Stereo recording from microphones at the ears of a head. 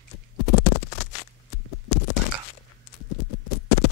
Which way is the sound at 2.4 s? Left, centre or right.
Left.